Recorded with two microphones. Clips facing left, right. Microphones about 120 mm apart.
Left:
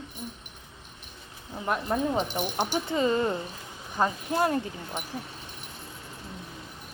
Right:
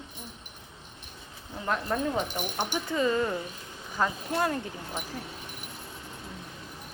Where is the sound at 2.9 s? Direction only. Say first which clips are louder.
Even; 25° left (ahead or behind).